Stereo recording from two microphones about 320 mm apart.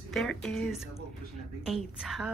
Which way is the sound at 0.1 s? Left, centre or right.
Centre.